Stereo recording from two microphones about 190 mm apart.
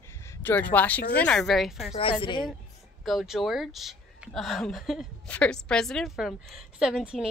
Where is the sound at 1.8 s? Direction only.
30° left (ahead or behind).